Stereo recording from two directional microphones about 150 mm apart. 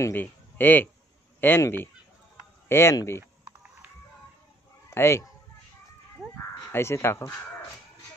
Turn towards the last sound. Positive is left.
turn(degrees=15)  # may be behind; listen again after turning